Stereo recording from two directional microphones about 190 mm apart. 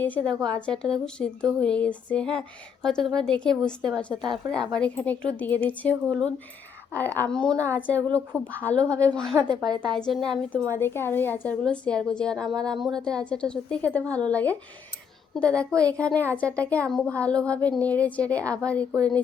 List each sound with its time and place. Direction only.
0.5 s a woman's voice: 5° left (ahead or behind)
9.6 s a woman's voice: 20° right (ahead or behind)
10.1 s a woman's voice: centre (ahead or behind)